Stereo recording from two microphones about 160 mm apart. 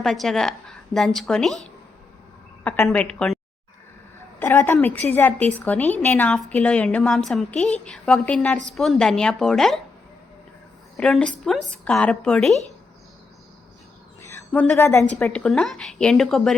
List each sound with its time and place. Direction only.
0.0 s speech: centre (ahead or behind)
2.6 s a woman's voice: 15° left (ahead or behind)
4.4 s a woman's voice: 10° left (ahead or behind)
10.9 s speech: 5° left (ahead or behind)
14.2 s a sound: 15° left (ahead or behind)
15.2 s speech: 5° left (ahead or behind)